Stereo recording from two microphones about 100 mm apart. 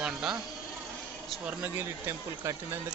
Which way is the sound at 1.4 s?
20° right (ahead or behind).